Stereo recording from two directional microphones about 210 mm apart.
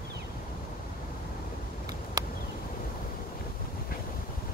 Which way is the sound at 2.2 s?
15° right (ahead or behind).